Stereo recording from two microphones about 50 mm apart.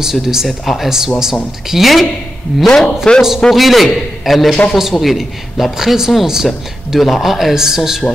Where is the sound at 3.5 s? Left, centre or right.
Centre.